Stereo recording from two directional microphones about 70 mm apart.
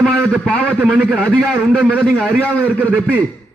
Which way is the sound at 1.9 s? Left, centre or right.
Centre.